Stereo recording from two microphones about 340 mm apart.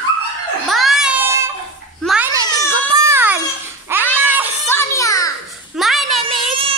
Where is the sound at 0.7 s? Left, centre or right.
Centre.